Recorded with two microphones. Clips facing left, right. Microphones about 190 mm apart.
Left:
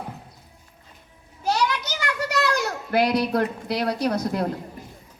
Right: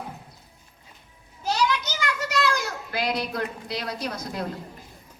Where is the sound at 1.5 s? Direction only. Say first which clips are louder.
Left 1 dB; 60° left (ahead or behind).